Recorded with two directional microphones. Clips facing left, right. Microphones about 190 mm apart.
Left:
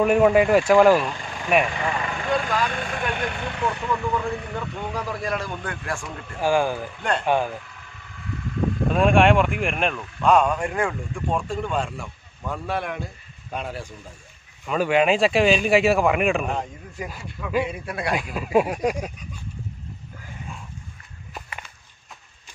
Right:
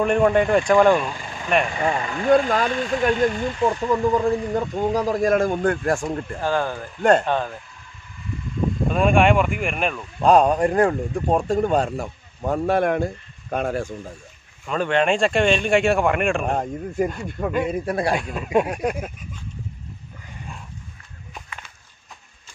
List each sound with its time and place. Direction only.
0.0 s speech: 5° left (ahead or behind)
1.8 s speech: 35° right (ahead or behind)
2.3 s a man's voice: 50° right (ahead or behind)
3.2 s speech: 65° left (ahead or behind)
3.8 s a man's voice: 40° right (ahead or behind)
6.4 s speech: 10° left (ahead or behind)
7.0 s a man's voice: 45° right (ahead or behind)
7.2 s speech: 10° left (ahead or behind)
8.9 s speech: centre (ahead or behind)
10.2 s speech: 35° right (ahead or behind)
14.7 s speech: 5° left (ahead or behind)
16.4 s a man's voice: 50° right (ahead or behind)
18.1 s speech: centre (ahead or behind)